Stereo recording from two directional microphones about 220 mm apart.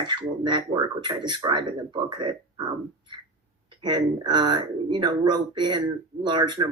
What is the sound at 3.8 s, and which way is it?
Speech, 20° right (ahead or behind).